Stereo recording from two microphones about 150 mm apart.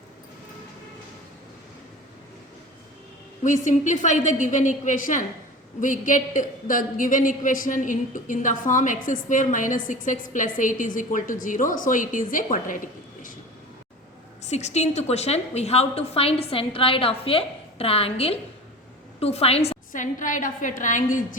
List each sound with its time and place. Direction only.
3.4 s a man's voice: 55° left (ahead or behind)
14.4 s a woman's voice: 50° left (ahead or behind)
19.9 s a man's voice: 60° left (ahead or behind)